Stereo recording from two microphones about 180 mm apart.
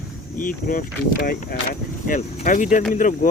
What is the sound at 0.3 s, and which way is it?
Speech, 50° left (ahead or behind).